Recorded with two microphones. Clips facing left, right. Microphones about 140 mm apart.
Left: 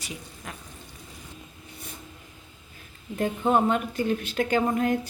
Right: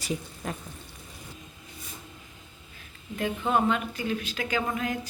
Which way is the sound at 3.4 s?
25° left (ahead or behind).